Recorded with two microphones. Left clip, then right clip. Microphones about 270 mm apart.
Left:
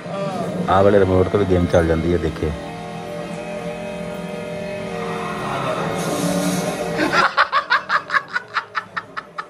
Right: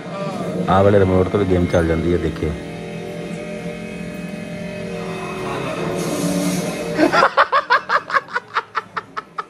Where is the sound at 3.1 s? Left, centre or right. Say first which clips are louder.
Left 1 dB; centre.